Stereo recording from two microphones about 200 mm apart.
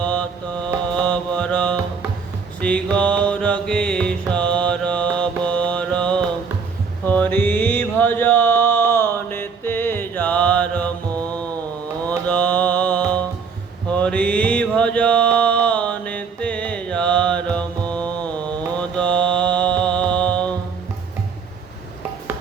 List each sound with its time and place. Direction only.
0.0 s mantra: 5° left (ahead or behind)
2.6 s music: 5° left (ahead or behind)
4.3 s mantra: 5° left (ahead or behind)
12.0 s music: 5° left (ahead or behind)
13.9 s mantra: 5° left (ahead or behind)
19.8 s music: 5° left (ahead or behind)